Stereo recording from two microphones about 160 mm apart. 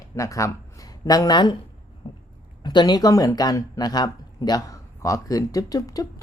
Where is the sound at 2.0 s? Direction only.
30° left (ahead or behind).